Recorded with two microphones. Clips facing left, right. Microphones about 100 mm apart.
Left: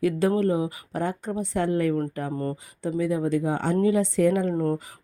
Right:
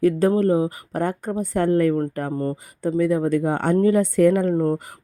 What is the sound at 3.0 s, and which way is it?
Speech, 50° right (ahead or behind).